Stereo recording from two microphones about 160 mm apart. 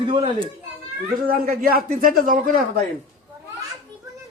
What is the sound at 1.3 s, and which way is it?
A man's voice, 65° right (ahead or behind).